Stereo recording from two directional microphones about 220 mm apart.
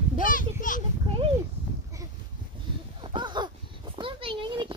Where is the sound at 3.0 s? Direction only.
20° right (ahead or behind).